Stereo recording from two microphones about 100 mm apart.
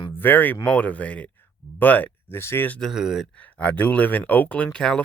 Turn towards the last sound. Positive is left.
turn(degrees=5)  # may be behind; listen again after turning